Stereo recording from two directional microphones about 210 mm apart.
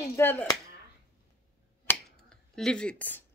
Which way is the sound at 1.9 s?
10° left (ahead or behind).